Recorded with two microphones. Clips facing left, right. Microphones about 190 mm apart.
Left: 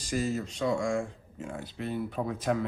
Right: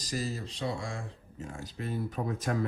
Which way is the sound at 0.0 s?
35° right (ahead or behind).